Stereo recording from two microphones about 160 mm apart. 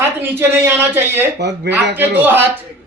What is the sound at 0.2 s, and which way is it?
A man's voice, 15° right (ahead or behind).